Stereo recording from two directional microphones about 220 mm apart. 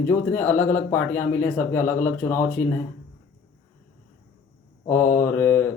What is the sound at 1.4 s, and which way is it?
Speech, 10° left (ahead or behind).